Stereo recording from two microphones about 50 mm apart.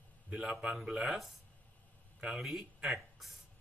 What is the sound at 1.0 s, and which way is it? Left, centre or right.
Speech, centre.